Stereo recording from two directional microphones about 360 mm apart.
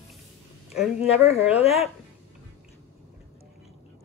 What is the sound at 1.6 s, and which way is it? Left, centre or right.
Speech, centre.